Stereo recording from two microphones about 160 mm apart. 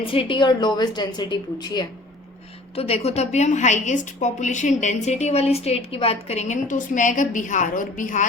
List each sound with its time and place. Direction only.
0.0 s a woman's voice: 35° left (ahead or behind)
2.7 s a woman's voice: 40° left (ahead or behind)